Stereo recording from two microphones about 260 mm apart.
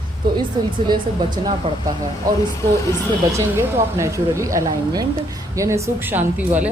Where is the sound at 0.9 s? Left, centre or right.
Centre.